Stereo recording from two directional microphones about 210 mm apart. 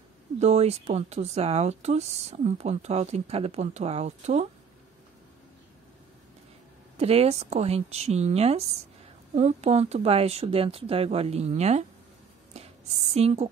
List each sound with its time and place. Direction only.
0.4 s speech: 30° right (ahead or behind)
7.0 s speech: 30° right (ahead or behind)
13.1 s speech: 30° right (ahead or behind)